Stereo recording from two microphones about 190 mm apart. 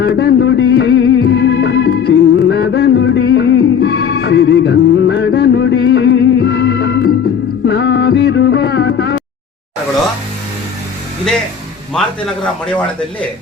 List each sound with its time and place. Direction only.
0.0 s music: 60° left (ahead or behind)